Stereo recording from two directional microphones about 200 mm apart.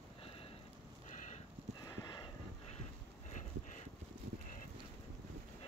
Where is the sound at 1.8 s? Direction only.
15° left (ahead or behind).